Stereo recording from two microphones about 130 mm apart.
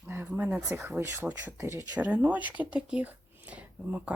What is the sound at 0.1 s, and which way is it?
Speech, 15° right (ahead or behind).